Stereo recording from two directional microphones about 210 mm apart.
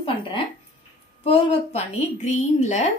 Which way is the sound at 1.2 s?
25° left (ahead or behind).